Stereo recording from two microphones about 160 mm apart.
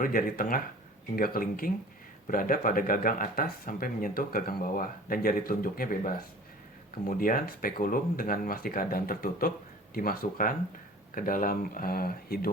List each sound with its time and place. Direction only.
0.0 s speech: 60° left (ahead or behind)